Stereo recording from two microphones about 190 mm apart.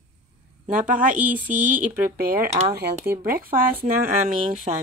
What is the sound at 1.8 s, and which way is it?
Speech, 50° right (ahead or behind).